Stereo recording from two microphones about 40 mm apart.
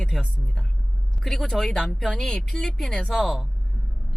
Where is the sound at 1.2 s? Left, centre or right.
Centre.